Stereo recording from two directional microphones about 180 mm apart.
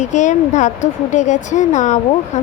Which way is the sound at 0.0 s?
40° left (ahead or behind).